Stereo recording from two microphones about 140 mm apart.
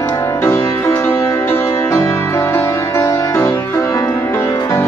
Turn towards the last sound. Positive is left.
turn(degrees=20)  # may be behind; listen again after turning